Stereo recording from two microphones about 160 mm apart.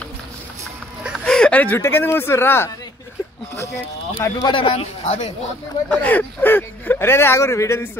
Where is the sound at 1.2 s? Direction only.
5° left (ahead or behind).